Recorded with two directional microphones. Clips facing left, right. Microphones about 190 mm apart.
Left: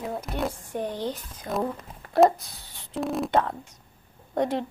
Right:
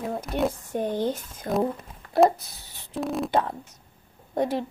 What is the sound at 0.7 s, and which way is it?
Speech, 45° right (ahead or behind).